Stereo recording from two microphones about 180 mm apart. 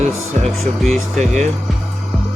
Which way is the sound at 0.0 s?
40° right (ahead or behind).